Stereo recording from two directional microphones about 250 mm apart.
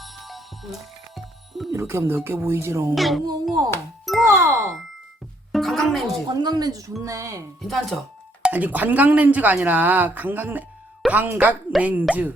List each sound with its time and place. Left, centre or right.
0.0 s music: centre
1.7 s speech: centre
2.9 s speech: centre
3.7 s music: centre
4.2 s speech: centre
5.5 s music: centre
6.2 s speech: centre
7.7 s speech: centre